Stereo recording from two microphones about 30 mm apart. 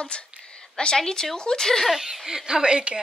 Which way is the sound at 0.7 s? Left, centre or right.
Left.